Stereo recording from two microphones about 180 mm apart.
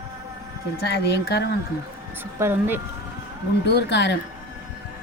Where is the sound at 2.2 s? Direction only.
10° right (ahead or behind).